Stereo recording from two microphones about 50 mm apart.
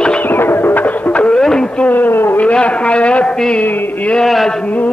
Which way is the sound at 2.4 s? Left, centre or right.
Left.